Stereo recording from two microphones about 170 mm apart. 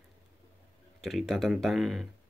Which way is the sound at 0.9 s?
Centre (ahead or behind).